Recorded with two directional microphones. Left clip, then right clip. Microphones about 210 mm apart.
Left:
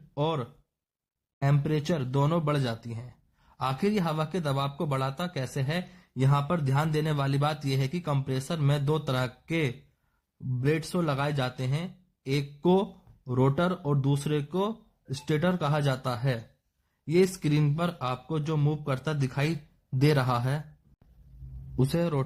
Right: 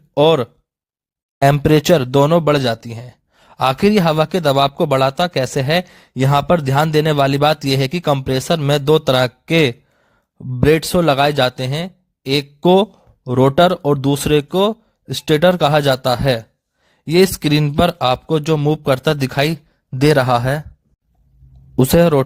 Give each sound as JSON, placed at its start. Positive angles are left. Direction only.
{"t": 0.1, "sound": "a man's voice", "side_deg": -45}
{"t": 21.8, "sound": "a man's voice", "side_deg": -45}